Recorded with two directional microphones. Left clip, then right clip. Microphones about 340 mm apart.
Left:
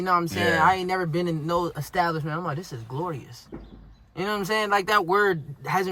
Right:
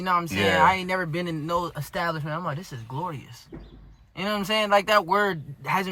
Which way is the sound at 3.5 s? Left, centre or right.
Left.